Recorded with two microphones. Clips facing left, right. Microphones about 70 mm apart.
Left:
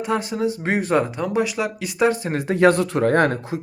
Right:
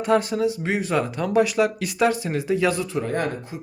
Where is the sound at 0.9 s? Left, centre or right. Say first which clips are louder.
Right 2 dB; left.